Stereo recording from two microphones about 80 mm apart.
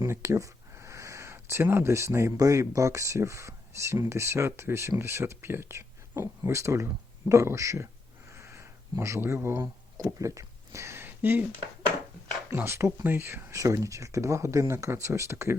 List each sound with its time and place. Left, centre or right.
0.0 s speech: right
8.3 s a sound: right
10.0 s speech: right
12.5 s speech: right
13.5 s speech: right